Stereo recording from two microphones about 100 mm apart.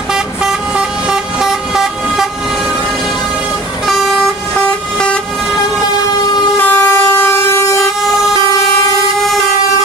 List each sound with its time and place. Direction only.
0.1 s vehicle: 5° right (ahead or behind)
3.8 s vehicle: centre (ahead or behind)
6.5 s vehicle: 20° left (ahead or behind)